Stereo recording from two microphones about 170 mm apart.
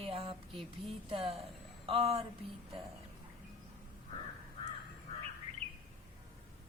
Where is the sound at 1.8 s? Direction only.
30° right (ahead or behind).